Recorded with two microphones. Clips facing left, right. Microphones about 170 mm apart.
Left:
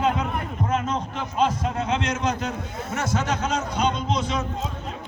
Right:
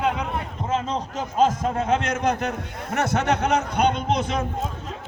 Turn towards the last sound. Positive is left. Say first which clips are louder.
# right 2 dB
turn(degrees=-55)  # may be behind; listen again after turning